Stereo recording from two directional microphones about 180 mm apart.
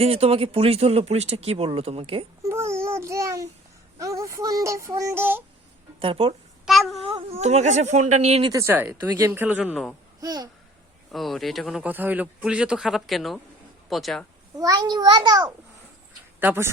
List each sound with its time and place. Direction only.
0.0 s speech: 35° right (ahead or behind)
2.4 s babbling: 15° right (ahead or behind)
3.9 s speech: 20° right (ahead or behind)
6.0 s speech: 30° right (ahead or behind)
6.7 s child singing: centre (ahead or behind)
7.0 s speech: 30° right (ahead or behind)
8.4 s speech: 15° right (ahead or behind)
10.2 s speech: 20° right (ahead or behind)
11.1 s a man's voice: centre (ahead or behind)
14.6 s a child's voice: 20° right (ahead or behind)